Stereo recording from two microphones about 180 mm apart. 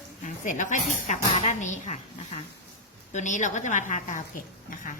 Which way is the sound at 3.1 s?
45° left (ahead or behind).